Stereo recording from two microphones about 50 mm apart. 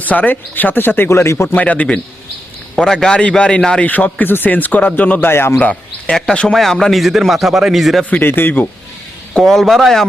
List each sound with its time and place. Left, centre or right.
0.0 s speech: left
1.5 s speech: left
2.7 s a man's voice: centre
3.8 s speech: left
5.2 s speech: left
5.5 s a man's voice: left
6.5 s a man's voice: centre
8.1 s speech: left
9.5 s a man's voice: centre